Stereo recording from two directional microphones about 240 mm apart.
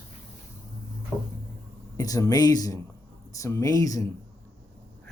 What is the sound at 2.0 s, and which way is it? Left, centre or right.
Speech, centre.